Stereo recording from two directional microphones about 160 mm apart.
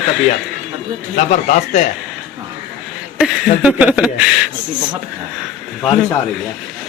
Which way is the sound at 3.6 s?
5° right (ahead or behind).